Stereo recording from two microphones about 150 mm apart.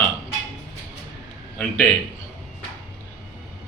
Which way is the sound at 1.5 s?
15° left (ahead or behind).